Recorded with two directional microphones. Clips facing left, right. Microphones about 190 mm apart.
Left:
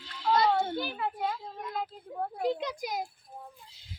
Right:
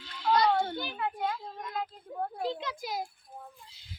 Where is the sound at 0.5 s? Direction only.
5° left (ahead or behind).